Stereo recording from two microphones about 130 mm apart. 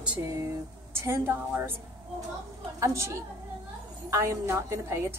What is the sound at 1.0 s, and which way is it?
Speech, 20° right (ahead or behind).